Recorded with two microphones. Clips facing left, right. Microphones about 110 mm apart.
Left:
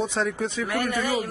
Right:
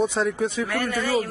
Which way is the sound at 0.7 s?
20° left (ahead or behind).